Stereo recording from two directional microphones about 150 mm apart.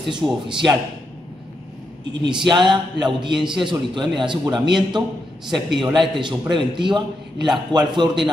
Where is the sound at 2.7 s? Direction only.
30° right (ahead or behind).